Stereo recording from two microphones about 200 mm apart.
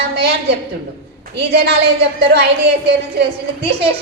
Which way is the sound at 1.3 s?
55° right (ahead or behind).